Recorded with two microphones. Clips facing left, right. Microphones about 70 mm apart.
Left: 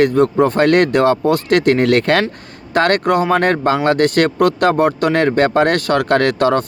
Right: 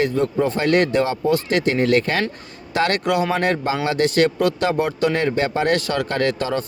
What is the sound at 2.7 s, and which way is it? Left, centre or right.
Speech, left.